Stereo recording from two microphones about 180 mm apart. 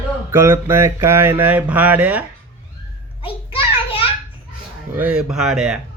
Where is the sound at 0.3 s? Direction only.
15° right (ahead or behind).